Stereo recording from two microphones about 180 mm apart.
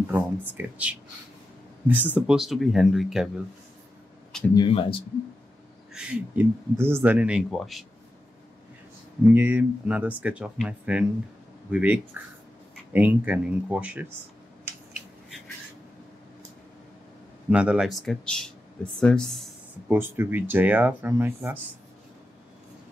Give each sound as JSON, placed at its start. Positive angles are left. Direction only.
{"t": 0.1, "sound": "speech", "side_deg": -10}
{"t": 4.6, "sound": "speech", "side_deg": 30}
{"t": 5.9, "sound": "speech", "side_deg": -10}
{"t": 9.3, "sound": "speech", "side_deg": -10}
{"t": 17.5, "sound": "speech", "side_deg": -5}
{"t": 19.9, "sound": "speech", "side_deg": -10}